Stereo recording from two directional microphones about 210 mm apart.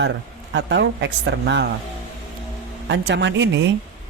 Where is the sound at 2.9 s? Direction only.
55° right (ahead or behind).